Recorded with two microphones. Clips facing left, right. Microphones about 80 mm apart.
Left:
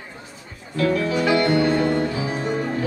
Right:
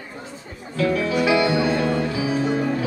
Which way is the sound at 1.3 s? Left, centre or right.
Left.